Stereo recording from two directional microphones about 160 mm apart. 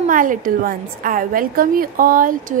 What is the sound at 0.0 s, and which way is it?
A woman's voice, 55° right (ahead or behind).